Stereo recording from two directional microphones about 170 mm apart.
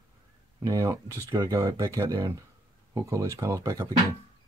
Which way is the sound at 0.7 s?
20° right (ahead or behind).